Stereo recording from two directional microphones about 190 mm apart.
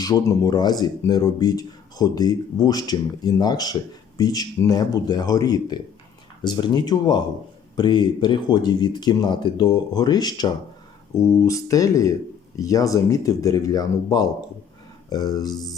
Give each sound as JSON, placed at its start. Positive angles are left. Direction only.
{"t": 0.0, "sound": "speech", "side_deg": 20}